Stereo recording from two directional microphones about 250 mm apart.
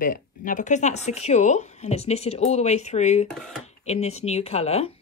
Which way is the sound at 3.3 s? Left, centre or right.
Centre.